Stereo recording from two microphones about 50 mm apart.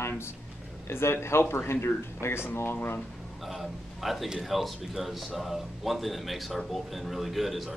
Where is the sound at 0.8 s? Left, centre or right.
Left.